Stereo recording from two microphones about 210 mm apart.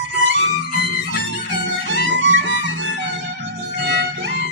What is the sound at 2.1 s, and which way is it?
Music, 60° right (ahead or behind).